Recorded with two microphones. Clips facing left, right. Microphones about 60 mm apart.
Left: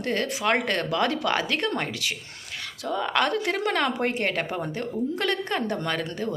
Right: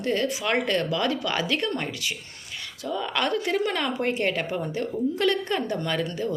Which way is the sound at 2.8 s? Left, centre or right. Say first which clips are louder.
Left 2 dB; left.